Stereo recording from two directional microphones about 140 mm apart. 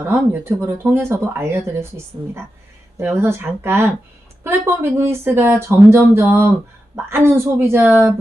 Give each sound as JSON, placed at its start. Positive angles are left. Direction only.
{"t": 0.1, "sound": "speech", "side_deg": -15}
{"t": 3.0, "sound": "speech", "side_deg": -15}